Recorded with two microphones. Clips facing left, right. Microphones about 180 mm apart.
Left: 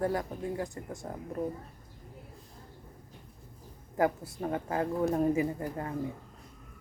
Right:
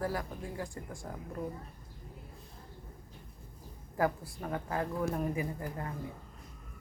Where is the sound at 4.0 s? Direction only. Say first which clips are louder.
Left 3 dB; 20° left (ahead or behind).